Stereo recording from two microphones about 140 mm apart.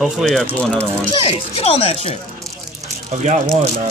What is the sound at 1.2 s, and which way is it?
Speech, 45° left (ahead or behind).